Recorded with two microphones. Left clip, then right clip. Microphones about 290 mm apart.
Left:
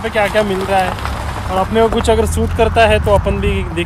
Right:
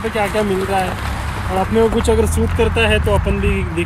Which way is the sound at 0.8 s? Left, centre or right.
Centre.